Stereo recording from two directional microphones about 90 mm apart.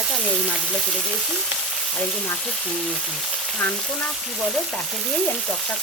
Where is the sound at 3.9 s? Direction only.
Centre (ahead or behind).